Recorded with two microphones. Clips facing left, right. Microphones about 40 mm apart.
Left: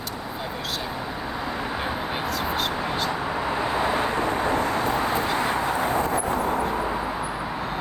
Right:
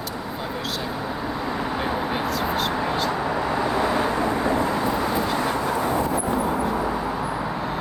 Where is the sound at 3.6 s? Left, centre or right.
Left.